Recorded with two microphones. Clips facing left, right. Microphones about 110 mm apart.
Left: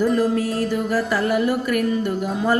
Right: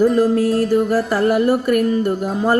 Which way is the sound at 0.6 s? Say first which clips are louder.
Right 5 dB; 40° right (ahead or behind).